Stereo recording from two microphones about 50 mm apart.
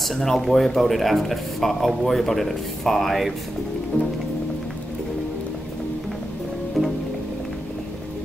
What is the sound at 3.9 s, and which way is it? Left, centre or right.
Music, left.